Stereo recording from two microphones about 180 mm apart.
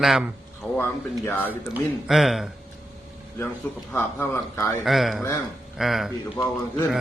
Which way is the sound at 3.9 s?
15° left (ahead or behind).